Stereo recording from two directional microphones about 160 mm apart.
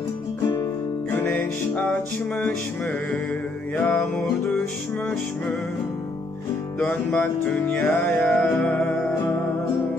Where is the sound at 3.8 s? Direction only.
10° left (ahead or behind).